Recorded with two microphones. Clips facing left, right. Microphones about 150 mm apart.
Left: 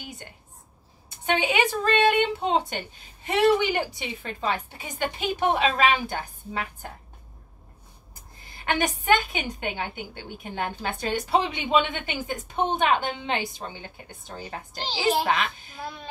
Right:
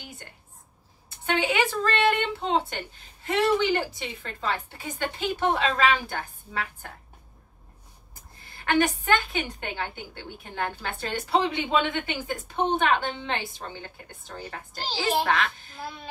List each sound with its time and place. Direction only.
1.2 s a woman's voice: 15° left (ahead or behind)
8.5 s a woman's voice: 15° left (ahead or behind)